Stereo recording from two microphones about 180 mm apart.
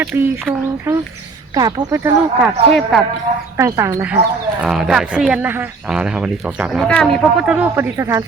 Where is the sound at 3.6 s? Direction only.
15° right (ahead or behind).